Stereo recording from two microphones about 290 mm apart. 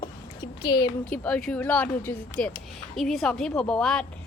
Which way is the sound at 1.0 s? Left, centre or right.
Centre.